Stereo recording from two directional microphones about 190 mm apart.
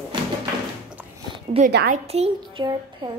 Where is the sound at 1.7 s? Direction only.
55° right (ahead or behind).